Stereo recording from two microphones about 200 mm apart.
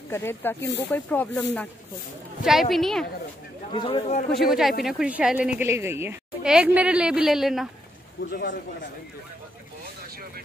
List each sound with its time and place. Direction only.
0.1 s speech: 10° left (ahead or behind)
2.7 s a woman's voice: centre (ahead or behind)
3.7 s a man's voice: 25° left (ahead or behind)
4.3 s a woman's voice: centre (ahead or behind)
8.2 s speech: 55° left (ahead or behind)